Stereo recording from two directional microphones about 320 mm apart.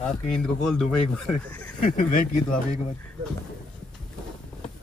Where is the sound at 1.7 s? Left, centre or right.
Left.